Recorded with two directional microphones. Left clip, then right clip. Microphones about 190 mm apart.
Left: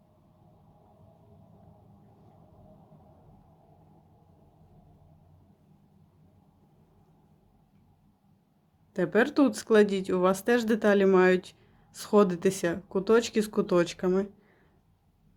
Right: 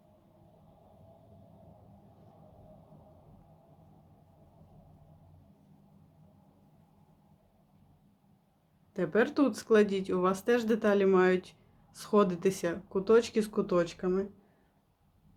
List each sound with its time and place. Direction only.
8.9 s speech: 30° left (ahead or behind)